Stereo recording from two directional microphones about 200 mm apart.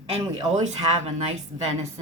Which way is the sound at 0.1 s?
35° right (ahead or behind).